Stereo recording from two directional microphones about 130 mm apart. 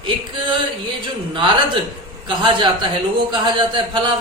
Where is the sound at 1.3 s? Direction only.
40° right (ahead or behind).